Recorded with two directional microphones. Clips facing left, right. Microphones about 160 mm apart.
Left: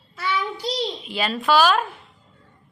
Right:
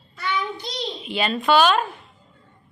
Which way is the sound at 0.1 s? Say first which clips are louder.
Left 1 dB; 5° left (ahead or behind).